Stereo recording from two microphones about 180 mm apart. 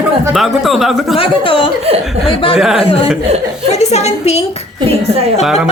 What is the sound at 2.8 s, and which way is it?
A woman's voice, 30° left (ahead or behind).